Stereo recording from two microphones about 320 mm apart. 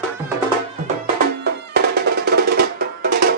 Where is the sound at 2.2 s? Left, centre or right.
Right.